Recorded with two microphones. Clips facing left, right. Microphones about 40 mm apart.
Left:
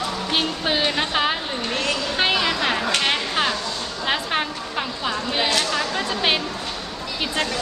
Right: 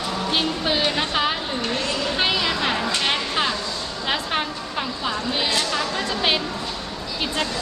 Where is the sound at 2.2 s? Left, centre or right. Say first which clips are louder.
Left 2 dB; centre.